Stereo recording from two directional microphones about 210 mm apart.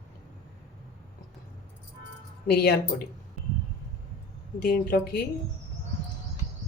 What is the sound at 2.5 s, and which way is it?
Speech, 45° left (ahead or behind).